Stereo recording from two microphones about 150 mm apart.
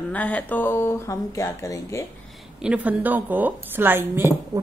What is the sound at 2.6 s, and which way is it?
A woman's voice, 10° right (ahead or behind).